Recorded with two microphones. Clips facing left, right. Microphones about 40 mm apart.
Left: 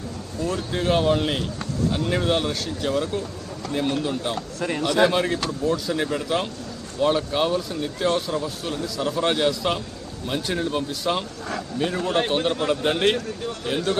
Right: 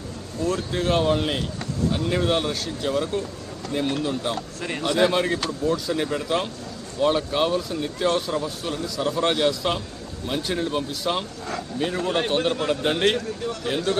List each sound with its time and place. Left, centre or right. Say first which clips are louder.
0.4 s speech: even; centre